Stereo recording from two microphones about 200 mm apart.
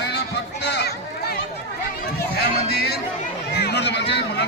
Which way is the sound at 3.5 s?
55° left (ahead or behind).